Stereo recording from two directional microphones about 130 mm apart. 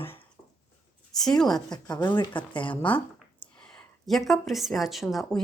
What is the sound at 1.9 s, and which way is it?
Speech, 35° left (ahead or behind).